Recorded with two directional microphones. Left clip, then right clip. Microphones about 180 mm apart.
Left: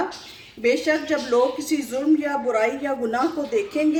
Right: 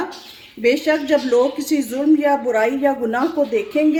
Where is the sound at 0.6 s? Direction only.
55° right (ahead or behind).